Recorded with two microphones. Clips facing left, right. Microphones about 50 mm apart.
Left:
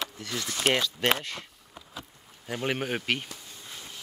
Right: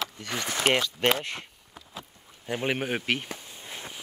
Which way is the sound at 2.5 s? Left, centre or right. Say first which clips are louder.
Right 1 dB; centre.